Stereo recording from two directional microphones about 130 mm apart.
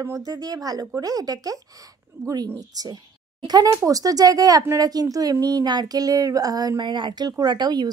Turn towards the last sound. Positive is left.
turn(degrees=-35)  # may be behind; listen again after turning